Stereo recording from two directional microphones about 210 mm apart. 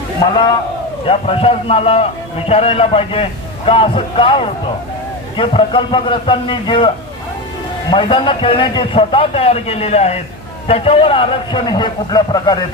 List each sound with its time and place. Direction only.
1.0 s a man's voice: 25° left (ahead or behind)